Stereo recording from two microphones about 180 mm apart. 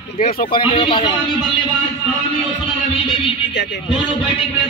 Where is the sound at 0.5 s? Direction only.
30° left (ahead or behind).